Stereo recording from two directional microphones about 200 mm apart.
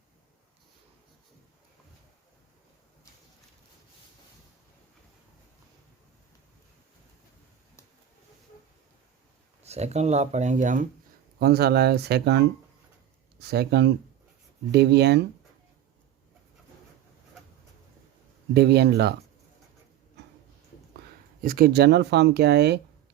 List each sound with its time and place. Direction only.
9.6 s speech: 35° right (ahead or behind)
11.3 s speech: 50° right (ahead or behind)
18.5 s speech: 55° right (ahead or behind)
21.4 s speech: 45° right (ahead or behind)